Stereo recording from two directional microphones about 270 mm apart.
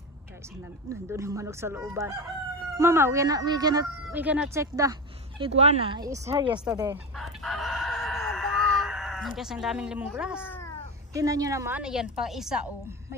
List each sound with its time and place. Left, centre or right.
0.8 s speech: centre
5.4 s speech: right
7.2 s chicken: centre
10.4 s crow: centre
11.1 s a woman's voice: centre